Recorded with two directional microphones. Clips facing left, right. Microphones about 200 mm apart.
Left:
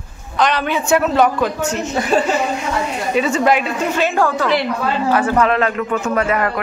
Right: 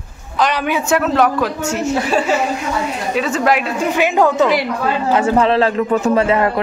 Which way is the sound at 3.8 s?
15° right (ahead or behind).